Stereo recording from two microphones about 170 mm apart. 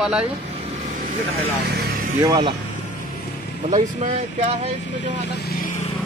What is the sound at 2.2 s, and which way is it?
Speech, 25° right (ahead or behind).